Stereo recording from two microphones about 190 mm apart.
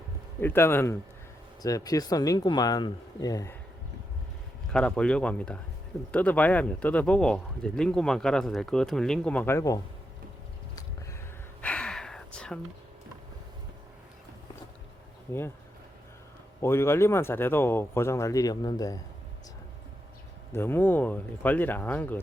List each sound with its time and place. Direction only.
0.3 s speech: 10° left (ahead or behind)
4.7 s speech: 5° left (ahead or behind)
11.6 s gasp: 5° left (ahead or behind)
15.3 s speech: 10° left (ahead or behind)
16.6 s speech: 15° left (ahead or behind)
20.5 s speech: 10° left (ahead or behind)